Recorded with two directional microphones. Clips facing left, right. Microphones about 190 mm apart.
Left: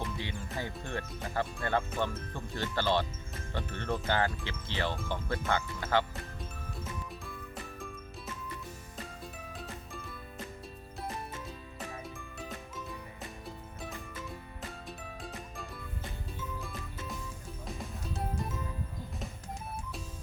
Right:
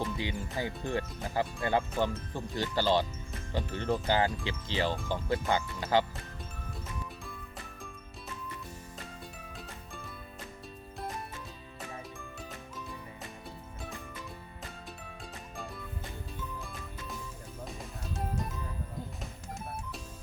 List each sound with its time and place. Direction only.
0.0 s music: 15° right (ahead or behind)
0.6 s speech: 15° right (ahead or behind)
16.6 s music: centre (ahead or behind)